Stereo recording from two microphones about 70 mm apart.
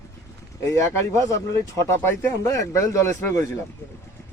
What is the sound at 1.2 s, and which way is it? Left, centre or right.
Speech, left.